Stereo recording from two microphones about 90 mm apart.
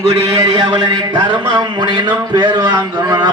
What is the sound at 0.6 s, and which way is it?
A man's voice, 50° right (ahead or behind).